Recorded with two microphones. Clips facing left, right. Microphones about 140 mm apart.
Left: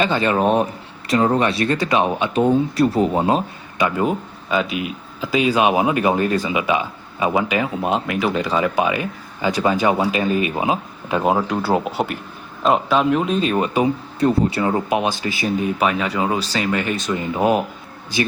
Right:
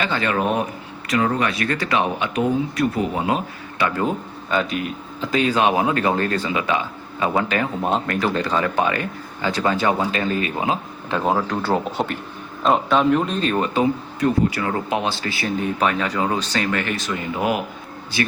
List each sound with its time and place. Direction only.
0.0 s speech: 20° left (ahead or behind)
3.8 s speech: 15° left (ahead or behind)
14.2 s speech: 30° left (ahead or behind)